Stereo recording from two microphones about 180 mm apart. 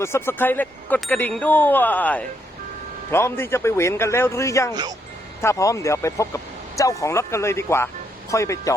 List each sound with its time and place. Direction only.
0.0 s speech: 15° left (ahead or behind)
4.7 s speech: 20° right (ahead or behind)
5.4 s speech: 15° left (ahead or behind)